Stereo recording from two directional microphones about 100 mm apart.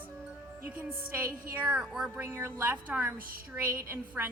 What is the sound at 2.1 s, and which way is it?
Speech, 25° right (ahead or behind).